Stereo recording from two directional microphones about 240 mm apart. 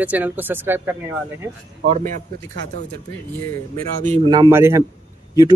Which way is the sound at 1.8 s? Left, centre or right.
Right.